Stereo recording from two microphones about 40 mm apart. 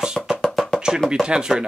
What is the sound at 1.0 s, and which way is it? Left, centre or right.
Speech, centre.